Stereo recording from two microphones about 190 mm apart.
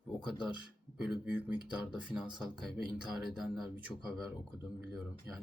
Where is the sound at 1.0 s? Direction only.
5° right (ahead or behind).